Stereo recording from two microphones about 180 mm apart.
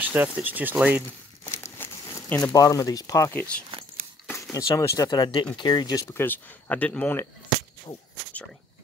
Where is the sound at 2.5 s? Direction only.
20° left (ahead or behind).